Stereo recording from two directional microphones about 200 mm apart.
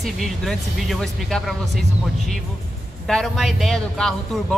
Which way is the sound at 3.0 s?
Centre (ahead or behind).